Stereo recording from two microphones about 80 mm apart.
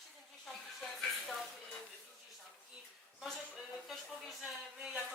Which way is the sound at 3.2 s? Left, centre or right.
Centre.